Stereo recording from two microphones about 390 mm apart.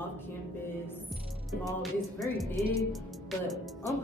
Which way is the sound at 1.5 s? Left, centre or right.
Centre.